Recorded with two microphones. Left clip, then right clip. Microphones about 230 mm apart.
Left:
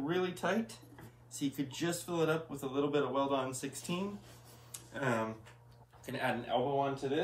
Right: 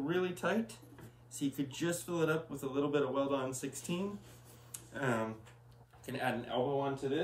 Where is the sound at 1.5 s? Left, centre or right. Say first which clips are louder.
Right 1 dB; centre.